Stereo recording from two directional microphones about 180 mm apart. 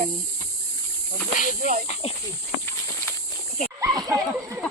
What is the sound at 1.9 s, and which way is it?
Speech, 35° left (ahead or behind).